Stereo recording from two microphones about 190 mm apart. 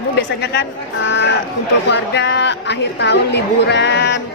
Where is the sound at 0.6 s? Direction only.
70° left (ahead or behind).